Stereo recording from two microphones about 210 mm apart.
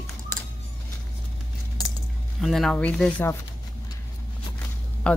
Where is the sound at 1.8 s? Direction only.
20° left (ahead or behind).